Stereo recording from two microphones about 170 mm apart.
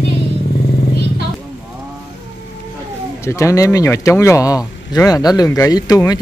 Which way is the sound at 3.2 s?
15° left (ahead or behind).